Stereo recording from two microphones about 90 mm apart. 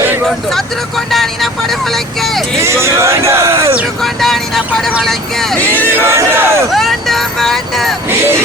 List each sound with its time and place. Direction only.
0.5 s vehicle: 5° left (ahead or behind)
2.6 s speech: 30° right (ahead or behind)
4.0 s speech: 5° left (ahead or behind)
5.8 s speech: 25° right (ahead or behind)
6.7 s speech: 5° left (ahead or behind)